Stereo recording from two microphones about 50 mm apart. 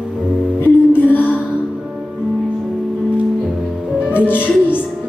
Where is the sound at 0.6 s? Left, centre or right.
Left.